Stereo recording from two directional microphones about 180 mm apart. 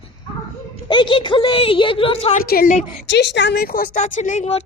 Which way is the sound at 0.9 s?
25° left (ahead or behind).